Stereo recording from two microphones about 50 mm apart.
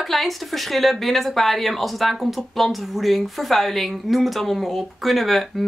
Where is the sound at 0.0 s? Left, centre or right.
Centre.